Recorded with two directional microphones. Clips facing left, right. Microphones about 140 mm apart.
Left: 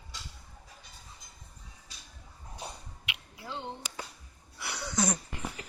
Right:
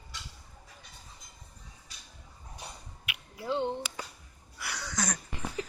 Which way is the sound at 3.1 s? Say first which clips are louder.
Left 1 dB; 25° left (ahead or behind).